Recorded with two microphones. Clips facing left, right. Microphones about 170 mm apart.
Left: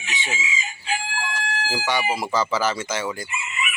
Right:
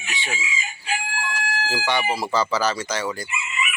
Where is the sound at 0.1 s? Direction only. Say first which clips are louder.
Left 1 dB; 20° left (ahead or behind).